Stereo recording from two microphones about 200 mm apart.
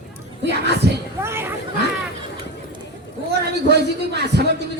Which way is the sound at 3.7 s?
55° right (ahead or behind).